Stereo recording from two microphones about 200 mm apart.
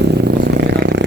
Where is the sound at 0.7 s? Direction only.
60° right (ahead or behind).